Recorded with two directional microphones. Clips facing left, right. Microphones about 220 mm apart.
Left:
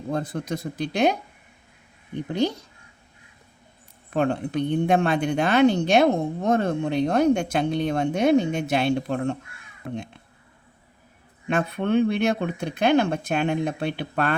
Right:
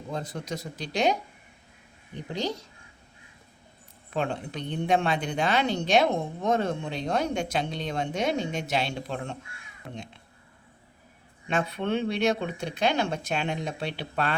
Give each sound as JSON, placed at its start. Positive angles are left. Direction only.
{"t": 0.1, "sound": "speech", "side_deg": 55}
{"t": 4.1, "sound": "speech", "side_deg": 55}
{"t": 11.4, "sound": "speech", "side_deg": 50}